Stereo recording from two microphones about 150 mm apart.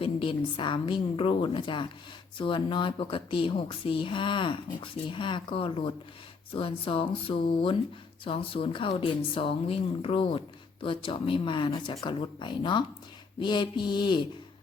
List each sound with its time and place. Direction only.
0.0 s speech: 35° left (ahead or behind)